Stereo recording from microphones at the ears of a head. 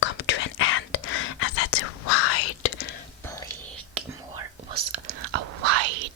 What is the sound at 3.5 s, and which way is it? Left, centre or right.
Whispering, right.